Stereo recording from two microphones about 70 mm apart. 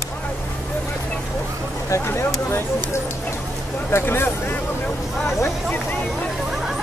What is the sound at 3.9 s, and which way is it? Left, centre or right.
Speech, left.